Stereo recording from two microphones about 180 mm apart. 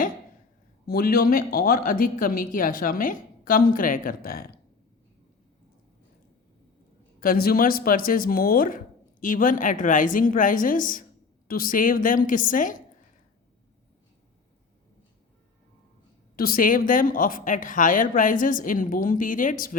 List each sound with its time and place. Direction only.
0.9 s speech: 55° left (ahead or behind)
7.2 s speech: 55° left (ahead or behind)
16.3 s speech: 55° left (ahead or behind)